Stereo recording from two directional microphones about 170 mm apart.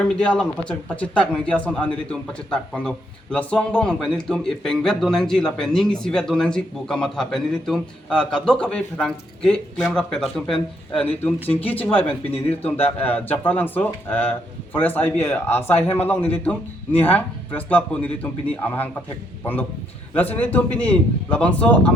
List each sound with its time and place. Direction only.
0.0 s speech: 5° left (ahead or behind)
12.0 s speech: 35° left (ahead or behind)
13.0 s speech: 10° left (ahead or behind)
20.1 s speech: 10° left (ahead or behind)